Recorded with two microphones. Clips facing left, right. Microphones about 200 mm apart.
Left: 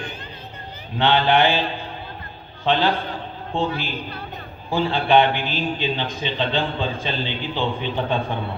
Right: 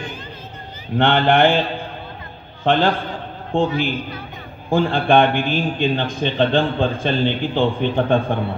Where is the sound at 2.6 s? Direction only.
50° right (ahead or behind).